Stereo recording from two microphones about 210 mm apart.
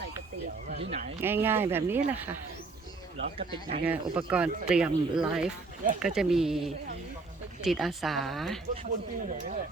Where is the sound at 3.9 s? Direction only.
5° right (ahead or behind).